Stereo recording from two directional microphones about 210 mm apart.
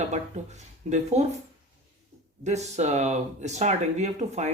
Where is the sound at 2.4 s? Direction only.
30° right (ahead or behind).